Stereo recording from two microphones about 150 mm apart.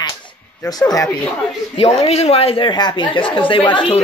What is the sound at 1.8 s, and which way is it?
A woman's voice, 45° left (ahead or behind).